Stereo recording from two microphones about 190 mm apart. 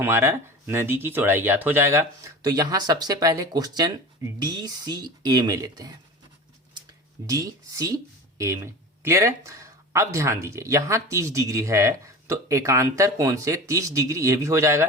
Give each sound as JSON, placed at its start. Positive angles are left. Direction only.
{"t": 0.0, "sound": "speech", "side_deg": -15}
{"t": 7.3, "sound": "speech", "side_deg": -15}